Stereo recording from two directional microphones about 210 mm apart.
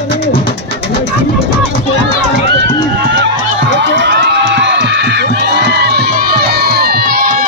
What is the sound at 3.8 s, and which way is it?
Crowd, 55° right (ahead or behind).